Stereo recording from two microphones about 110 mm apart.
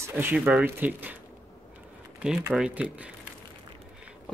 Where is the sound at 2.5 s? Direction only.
5° right (ahead or behind).